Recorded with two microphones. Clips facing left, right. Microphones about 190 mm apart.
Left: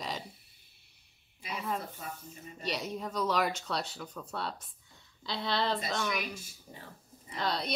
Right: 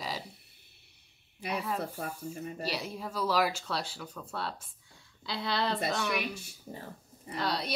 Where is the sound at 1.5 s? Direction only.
Centre (ahead or behind).